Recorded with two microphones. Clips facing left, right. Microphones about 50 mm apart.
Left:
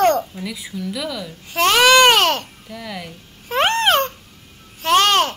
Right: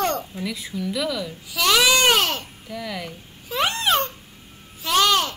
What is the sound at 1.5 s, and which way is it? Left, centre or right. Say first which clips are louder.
A child's voice: left 6 dB; left.